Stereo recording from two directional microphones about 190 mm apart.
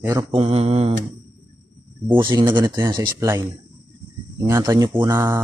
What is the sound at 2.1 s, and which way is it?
Speech, 25° right (ahead or behind).